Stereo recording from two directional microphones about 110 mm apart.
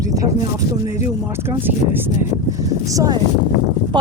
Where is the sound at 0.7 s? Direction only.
30° right (ahead or behind).